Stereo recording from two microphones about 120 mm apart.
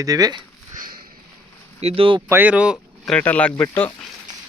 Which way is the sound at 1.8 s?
55° right (ahead or behind).